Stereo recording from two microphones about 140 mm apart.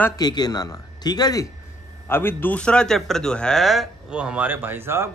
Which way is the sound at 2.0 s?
15° left (ahead or behind).